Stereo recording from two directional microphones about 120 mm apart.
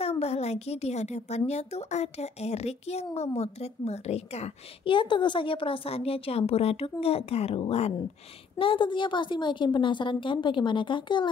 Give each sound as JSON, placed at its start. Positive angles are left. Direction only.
{"t": 0.0, "sound": "a woman's voice", "side_deg": 55}
{"t": 4.9, "sound": "a woman's voice", "side_deg": 40}